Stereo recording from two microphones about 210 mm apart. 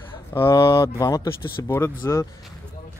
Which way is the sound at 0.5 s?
25° left (ahead or behind).